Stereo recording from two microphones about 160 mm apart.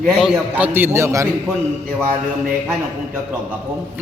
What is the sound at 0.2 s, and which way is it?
Mantra, 5° right (ahead or behind).